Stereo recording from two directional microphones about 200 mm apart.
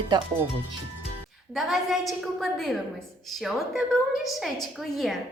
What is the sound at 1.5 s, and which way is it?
A woman's voice, centre (ahead or behind).